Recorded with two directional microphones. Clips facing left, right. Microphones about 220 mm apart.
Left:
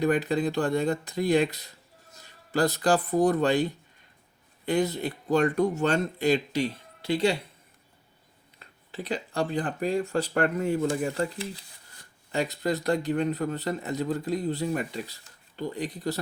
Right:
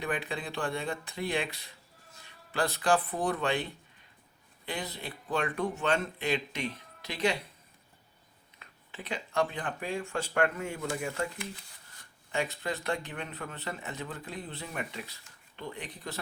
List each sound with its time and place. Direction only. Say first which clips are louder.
0.0 s a man's voice: left 10 dB; 40° left (ahead or behind)
8.5 s a man's voice: left 8 dB; 35° left (ahead or behind)